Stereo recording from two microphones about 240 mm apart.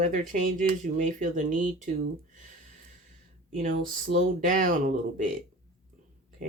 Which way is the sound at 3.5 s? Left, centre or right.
Right.